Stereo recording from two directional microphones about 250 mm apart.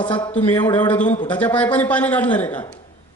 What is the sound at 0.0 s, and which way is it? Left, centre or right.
A man's voice, centre.